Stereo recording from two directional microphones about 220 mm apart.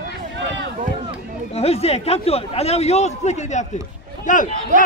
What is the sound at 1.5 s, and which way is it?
A man's voice, 25° left (ahead or behind).